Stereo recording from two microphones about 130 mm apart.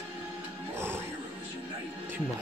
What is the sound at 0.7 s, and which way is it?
Music, 15° right (ahead or behind).